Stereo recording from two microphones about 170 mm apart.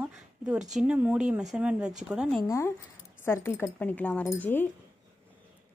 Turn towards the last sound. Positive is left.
turn(degrees=10)  # may be behind; listen again after turning